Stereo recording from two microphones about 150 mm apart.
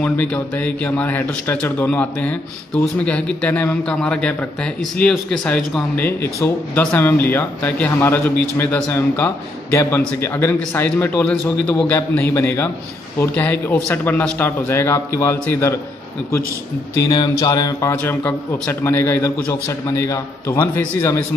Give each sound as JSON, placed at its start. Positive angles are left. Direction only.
{"t": 0.0, "sound": "speech", "side_deg": 10}
{"t": 17.1, "sound": "speech", "side_deg": 25}